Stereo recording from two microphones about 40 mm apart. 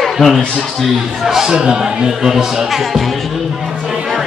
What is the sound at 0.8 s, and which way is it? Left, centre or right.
Speech, centre.